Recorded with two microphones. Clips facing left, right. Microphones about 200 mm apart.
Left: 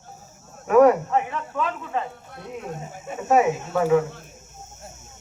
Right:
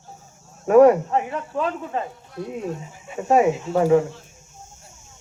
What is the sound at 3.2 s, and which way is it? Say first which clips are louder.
Speech: right 2 dB; 35° right (ahead or behind).